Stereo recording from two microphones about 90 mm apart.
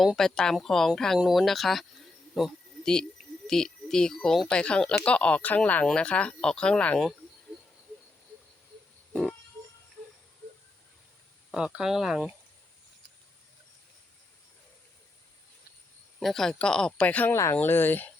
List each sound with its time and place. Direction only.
0.0 s a woman's voice: centre (ahead or behind)
11.5 s speech: 10° right (ahead or behind)
16.2 s speech: 5° left (ahead or behind)
17.3 s speech: 30° left (ahead or behind)